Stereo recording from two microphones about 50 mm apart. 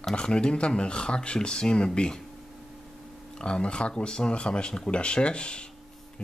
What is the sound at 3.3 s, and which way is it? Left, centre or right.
Speech, centre.